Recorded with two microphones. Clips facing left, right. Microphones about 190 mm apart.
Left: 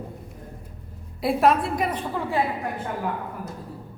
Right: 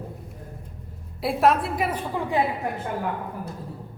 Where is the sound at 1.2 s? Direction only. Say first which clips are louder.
Left 1 dB; centre (ahead or behind).